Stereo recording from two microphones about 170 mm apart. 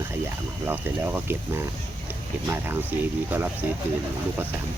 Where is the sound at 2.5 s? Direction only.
10° right (ahead or behind).